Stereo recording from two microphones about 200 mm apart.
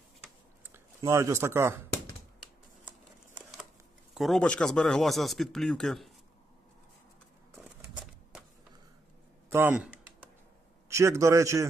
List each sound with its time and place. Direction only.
0.7 s speech: 15° right (ahead or behind)
4.1 s speech: centre (ahead or behind)
9.5 s a man's voice: 10° right (ahead or behind)